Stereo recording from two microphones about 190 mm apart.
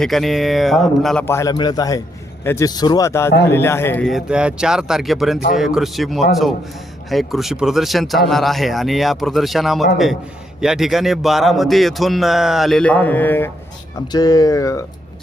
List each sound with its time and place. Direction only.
0.0 s a man's voice: centre (ahead or behind)
1.3 s a man's voice: 15° left (ahead or behind)
4.1 s a man's voice: 5° right (ahead or behind); by 14.8 s 15° left (ahead or behind)